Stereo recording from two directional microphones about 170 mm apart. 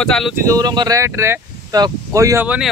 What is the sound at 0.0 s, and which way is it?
Speech, 5° left (ahead or behind).